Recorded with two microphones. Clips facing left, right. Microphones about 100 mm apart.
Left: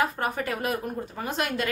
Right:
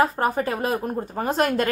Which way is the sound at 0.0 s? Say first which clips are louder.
Right 6 dB; 35° right (ahead or behind).